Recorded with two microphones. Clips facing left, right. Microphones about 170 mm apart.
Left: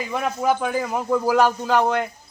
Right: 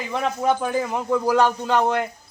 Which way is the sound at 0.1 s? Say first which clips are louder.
Right 1 dB; 5° left (ahead or behind).